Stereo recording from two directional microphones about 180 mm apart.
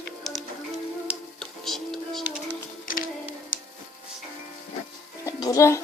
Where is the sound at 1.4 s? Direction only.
Centre (ahead or behind).